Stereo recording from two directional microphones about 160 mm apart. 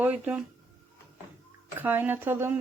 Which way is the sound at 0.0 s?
10° right (ahead or behind).